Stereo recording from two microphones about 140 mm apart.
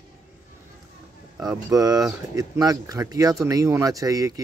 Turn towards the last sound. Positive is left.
turn(degrees=-25)  # may be behind; listen again after turning